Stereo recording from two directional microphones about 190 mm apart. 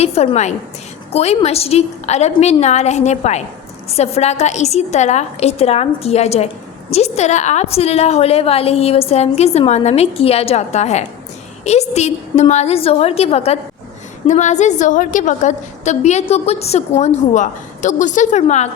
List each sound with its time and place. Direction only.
0.0 s a woman's voice: 35° left (ahead or behind)